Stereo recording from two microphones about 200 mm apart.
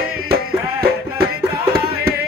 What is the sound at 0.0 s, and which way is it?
Music, 50° right (ahead or behind).